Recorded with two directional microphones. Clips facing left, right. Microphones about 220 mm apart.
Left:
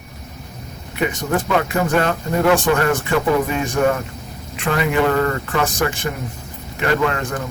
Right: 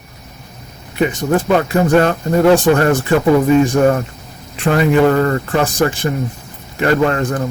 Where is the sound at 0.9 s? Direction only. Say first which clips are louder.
Right 5 dB; 35° right (ahead or behind).